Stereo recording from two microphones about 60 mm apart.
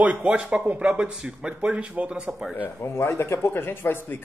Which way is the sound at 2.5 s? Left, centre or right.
Left.